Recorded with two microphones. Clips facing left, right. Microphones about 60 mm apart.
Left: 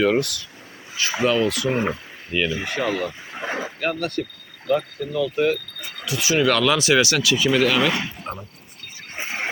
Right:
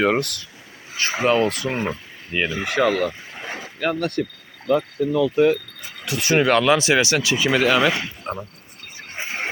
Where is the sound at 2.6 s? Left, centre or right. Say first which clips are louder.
Right 4 dB; right.